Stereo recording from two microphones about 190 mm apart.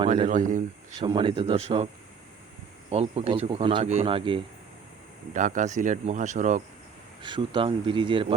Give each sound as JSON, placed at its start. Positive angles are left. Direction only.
{"t": 0.3, "sound": "speech", "side_deg": -40}
{"t": 0.9, "sound": "speech", "side_deg": -25}
{"t": 2.9, "sound": "speech", "side_deg": -35}
{"t": 5.3, "sound": "speech", "side_deg": -40}
{"t": 7.2, "sound": "speech", "side_deg": -25}